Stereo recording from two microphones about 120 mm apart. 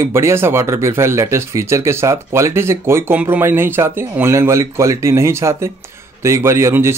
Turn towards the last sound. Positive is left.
turn(degrees=-20)  # may be behind; listen again after turning